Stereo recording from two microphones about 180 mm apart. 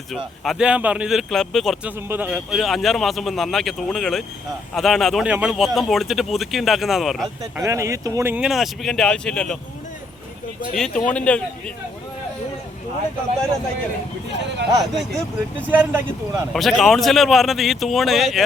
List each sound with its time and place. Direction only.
0.4 s a man's voice: 5° right (ahead or behind)
2.0 s a man's voice: 10° right (ahead or behind)
7.6 s a man's voice: 15° right (ahead or behind); by 9.6 s 5° left (ahead or behind)
10.8 s a man's voice: 5° left (ahead or behind)
14.3 s speech: 75° right (ahead or behind)
15.7 s speech: 10° right (ahead or behind)
16.5 s a man's voice: centre (ahead or behind)